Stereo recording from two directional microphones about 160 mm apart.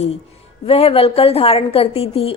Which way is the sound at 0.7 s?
40° left (ahead or behind).